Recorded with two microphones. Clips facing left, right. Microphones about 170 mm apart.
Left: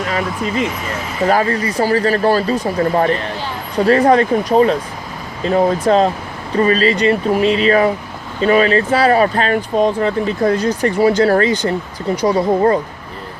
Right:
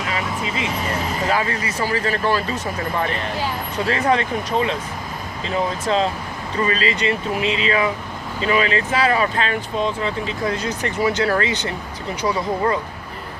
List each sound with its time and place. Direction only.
0.1 s speech: 50° left (ahead or behind)
10.6 s speech: 35° left (ahead or behind)